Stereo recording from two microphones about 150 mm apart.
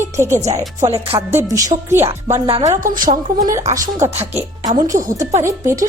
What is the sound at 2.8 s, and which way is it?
Speech, 65° right (ahead or behind).